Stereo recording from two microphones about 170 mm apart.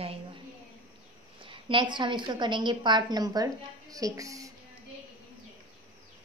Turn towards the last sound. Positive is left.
turn(degrees=-20)  # may be behind; listen again after turning